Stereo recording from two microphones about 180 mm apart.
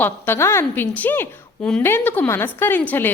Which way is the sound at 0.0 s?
15° left (ahead or behind).